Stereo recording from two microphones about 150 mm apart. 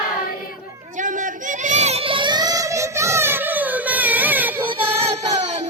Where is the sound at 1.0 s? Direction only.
60° right (ahead or behind); by 4.6 s 10° right (ahead or behind).